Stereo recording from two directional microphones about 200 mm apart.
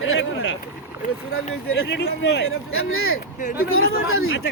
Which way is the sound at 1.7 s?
60° left (ahead or behind).